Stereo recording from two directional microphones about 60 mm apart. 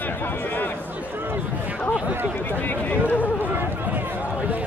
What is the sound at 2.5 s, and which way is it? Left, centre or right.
Speech, left.